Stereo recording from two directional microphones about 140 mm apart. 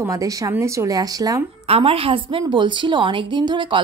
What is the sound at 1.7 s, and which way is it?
A woman's voice, 40° right (ahead or behind).